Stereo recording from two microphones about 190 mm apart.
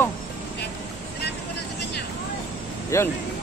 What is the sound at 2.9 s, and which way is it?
Speech, 15° left (ahead or behind).